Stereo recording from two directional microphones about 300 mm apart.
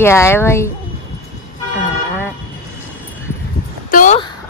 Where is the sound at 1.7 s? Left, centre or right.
Centre.